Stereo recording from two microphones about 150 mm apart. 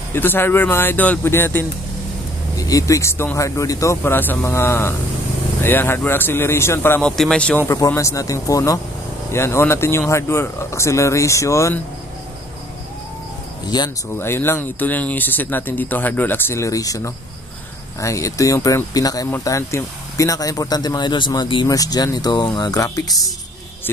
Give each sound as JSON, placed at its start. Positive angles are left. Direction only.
{"t": 0.1, "sound": "speech", "side_deg": 15}
{"t": 13.7, "sound": "speech", "side_deg": 25}
{"t": 14.1, "sound": "speech", "side_deg": 15}